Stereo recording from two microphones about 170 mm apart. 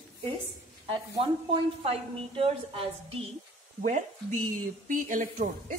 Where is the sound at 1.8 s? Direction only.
35° right (ahead or behind).